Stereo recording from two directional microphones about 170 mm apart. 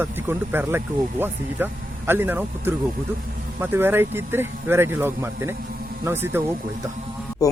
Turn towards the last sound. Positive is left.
turn(degrees=20)  # may be behind; listen again after turning